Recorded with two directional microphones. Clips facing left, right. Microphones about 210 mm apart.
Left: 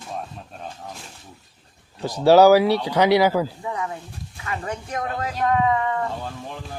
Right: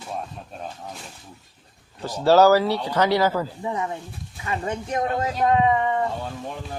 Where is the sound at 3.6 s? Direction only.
25° right (ahead or behind).